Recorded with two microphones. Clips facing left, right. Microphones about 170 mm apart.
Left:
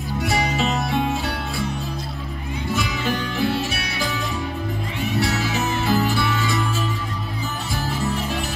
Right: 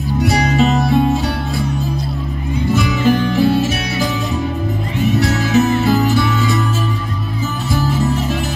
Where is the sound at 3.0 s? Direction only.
40° right (ahead or behind).